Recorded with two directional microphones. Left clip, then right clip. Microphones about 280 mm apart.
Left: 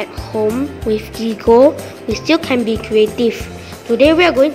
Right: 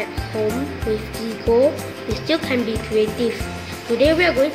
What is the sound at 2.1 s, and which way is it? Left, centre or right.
Speech, left.